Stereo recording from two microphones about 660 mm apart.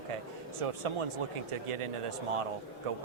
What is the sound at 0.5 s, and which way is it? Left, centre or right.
Speech, right.